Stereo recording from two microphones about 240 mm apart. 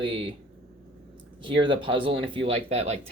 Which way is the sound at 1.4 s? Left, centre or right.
Right.